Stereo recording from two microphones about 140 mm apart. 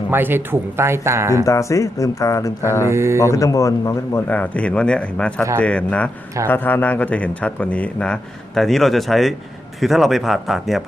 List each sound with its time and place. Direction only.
0.1 s speech: 15° right (ahead or behind)
1.5 s speech: 20° left (ahead or behind)
2.9 s speech: 20° right (ahead or behind)
3.2 s speech: 20° left (ahead or behind)
4.3 s a man's voice: 10° left (ahead or behind)